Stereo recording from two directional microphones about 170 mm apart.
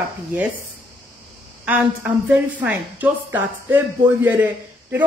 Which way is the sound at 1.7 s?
10° right (ahead or behind).